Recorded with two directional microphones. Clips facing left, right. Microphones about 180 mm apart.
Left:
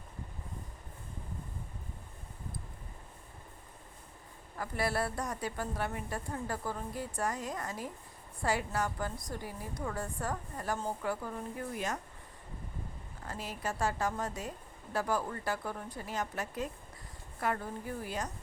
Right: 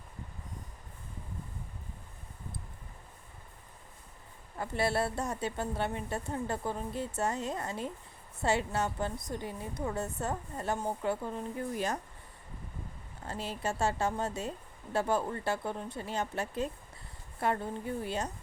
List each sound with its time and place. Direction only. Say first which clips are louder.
4.5 s a woman's voice: right 3 dB; 25° right (ahead or behind)
13.2 s a woman's voice: right 3 dB; 30° right (ahead or behind)